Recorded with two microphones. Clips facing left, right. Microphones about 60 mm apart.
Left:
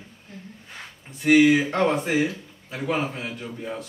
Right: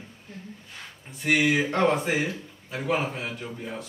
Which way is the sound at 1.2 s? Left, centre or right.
Centre.